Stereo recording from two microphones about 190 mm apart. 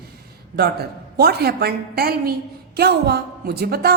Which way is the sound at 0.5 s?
55° right (ahead or behind).